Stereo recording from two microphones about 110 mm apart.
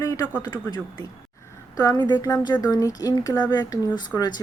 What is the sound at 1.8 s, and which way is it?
Speech, 35° left (ahead or behind).